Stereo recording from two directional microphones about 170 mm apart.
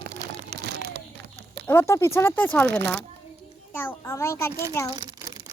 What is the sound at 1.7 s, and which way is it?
Speech, 15° left (ahead or behind).